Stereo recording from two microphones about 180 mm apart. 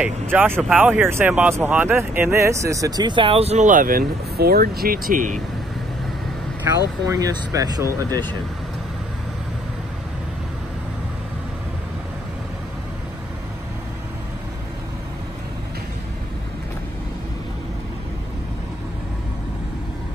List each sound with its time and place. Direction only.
0.0 s speech: 10° right (ahead or behind); by 5.4 s 45° right (ahead or behind)
6.7 s speech: 20° right (ahead or behind)